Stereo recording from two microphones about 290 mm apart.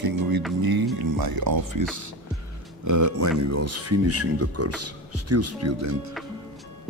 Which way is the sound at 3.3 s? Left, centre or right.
Right.